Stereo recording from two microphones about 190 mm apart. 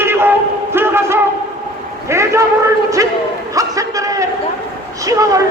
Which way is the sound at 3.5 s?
15° right (ahead or behind).